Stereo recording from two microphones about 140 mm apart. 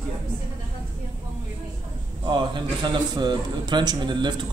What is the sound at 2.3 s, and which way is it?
A man's voice, 35° right (ahead or behind).